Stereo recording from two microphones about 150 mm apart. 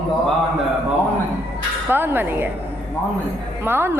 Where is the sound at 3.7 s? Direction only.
15° right (ahead or behind).